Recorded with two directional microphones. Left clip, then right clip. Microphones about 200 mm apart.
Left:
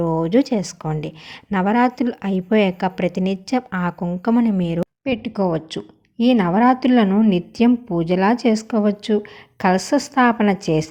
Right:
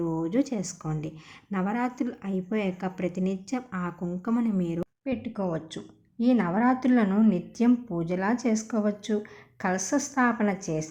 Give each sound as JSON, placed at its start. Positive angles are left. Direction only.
{"t": 0.0, "sound": "speech", "side_deg": 35}
{"t": 5.0, "sound": "a woman's voice", "side_deg": 30}